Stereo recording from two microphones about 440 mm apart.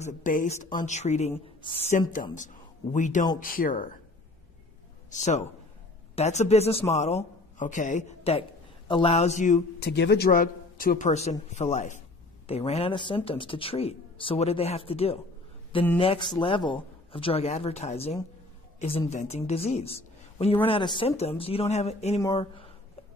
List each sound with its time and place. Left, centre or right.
0.0 s speech: centre
5.1 s speech: centre